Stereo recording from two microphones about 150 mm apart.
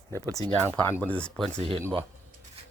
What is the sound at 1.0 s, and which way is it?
Speech, 10° left (ahead or behind).